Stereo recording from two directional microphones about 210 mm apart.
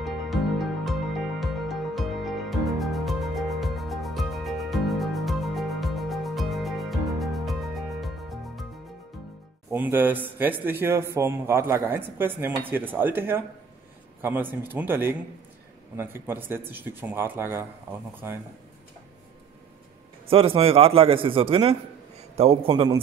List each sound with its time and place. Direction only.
0.0 s music: centre (ahead or behind)
9.7 s speech: 10° right (ahead or behind)
20.2 s a man's voice: 25° right (ahead or behind)